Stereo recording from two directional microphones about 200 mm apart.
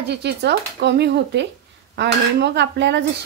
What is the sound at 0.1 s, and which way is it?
A woman's voice, 55° right (ahead or behind).